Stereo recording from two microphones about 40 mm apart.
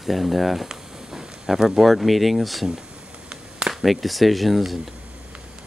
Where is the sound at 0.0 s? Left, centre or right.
Centre.